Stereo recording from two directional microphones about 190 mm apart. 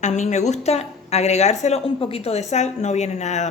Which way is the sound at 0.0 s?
40° left (ahead or behind).